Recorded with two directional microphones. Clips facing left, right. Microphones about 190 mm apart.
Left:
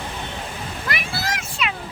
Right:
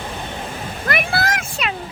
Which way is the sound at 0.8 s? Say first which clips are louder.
Right 7 dB; 55° right (ahead or behind).